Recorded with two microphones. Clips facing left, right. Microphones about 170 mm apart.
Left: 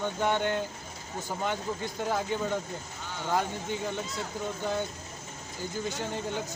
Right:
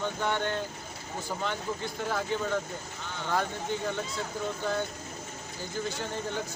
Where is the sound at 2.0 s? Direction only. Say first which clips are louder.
Left 1 dB; 15° left (ahead or behind).